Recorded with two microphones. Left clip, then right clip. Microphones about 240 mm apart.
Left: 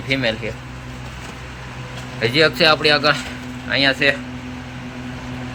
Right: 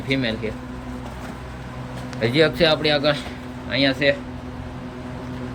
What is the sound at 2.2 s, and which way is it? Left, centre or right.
A man's voice, centre.